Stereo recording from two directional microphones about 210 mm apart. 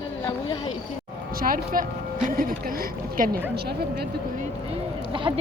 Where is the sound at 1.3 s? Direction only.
45° right (ahead or behind).